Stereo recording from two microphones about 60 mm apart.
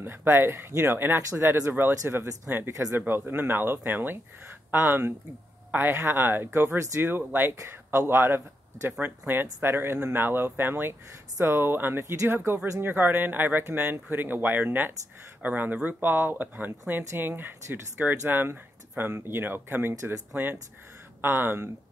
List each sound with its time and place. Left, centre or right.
0.0 s speech: right
12.0 s speech: right
12.8 s speech: right
16.1 s speech: right